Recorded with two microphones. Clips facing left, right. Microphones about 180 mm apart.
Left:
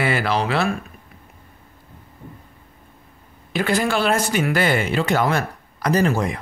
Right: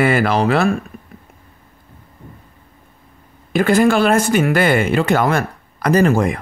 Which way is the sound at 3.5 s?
50° right (ahead or behind).